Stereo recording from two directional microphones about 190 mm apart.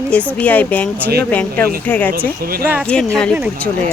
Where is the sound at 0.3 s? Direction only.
10° left (ahead or behind).